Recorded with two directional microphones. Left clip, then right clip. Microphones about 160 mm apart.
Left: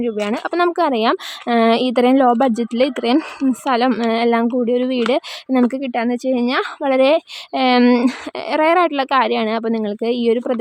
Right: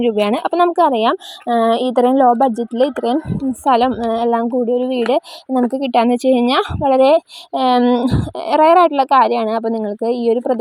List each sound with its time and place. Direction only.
0.0 s a woman's voice: 20° right (ahead or behind)
0.4 s a woman's voice: 5° right (ahead or behind)
5.9 s a woman's voice: 25° right (ahead or behind)
6.8 s a woman's voice: 5° left (ahead or behind)
7.8 s speech: 20° left (ahead or behind)
8.1 s a woman's voice: centre (ahead or behind)